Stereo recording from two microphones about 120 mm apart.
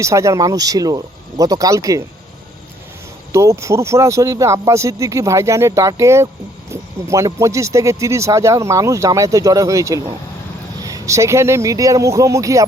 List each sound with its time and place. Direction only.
0.0 s speech: 25° right (ahead or behind)
3.3 s speech: 25° right (ahead or behind)